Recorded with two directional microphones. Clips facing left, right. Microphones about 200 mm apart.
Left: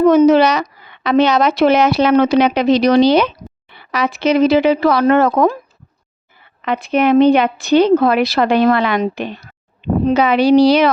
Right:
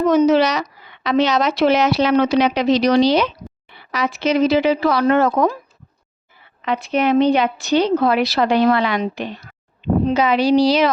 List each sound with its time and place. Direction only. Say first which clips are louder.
0.0 s speech: left 5 dB; 55° left (ahead or behind)
6.6 s speech: left 3 dB; 55° left (ahead or behind)